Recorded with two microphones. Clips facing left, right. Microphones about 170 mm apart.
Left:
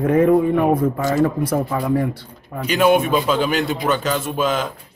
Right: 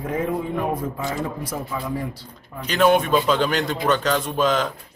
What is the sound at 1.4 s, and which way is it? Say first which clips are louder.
Speech: left 8 dB; 55° left (ahead or behind).